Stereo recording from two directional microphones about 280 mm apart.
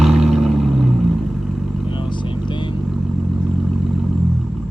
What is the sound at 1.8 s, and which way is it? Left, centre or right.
Vehicle, centre.